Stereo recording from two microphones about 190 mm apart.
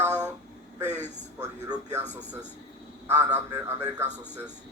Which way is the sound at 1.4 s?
15° right (ahead or behind).